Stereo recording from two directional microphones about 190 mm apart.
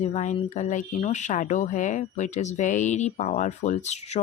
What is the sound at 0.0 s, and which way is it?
Speech, 40° left (ahead or behind).